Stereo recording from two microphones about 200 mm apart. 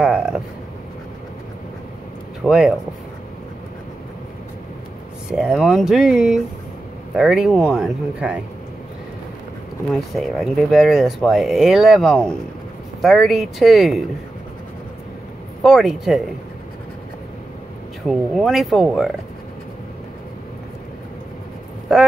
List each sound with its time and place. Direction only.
0.0 s a sound: 5° right (ahead or behind)
2.4 s speech: 5° right (ahead or behind)
5.3 s speech: 5° right (ahead or behind)
9.9 s speech: centre (ahead or behind)
15.6 s speech: centre (ahead or behind)
18.0 s speech: centre (ahead or behind)